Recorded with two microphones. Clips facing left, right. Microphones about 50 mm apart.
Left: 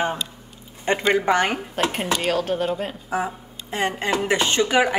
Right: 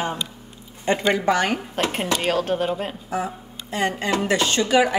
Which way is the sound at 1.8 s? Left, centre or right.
Centre.